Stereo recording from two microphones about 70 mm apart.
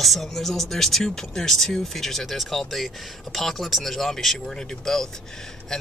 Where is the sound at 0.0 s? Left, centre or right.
Centre.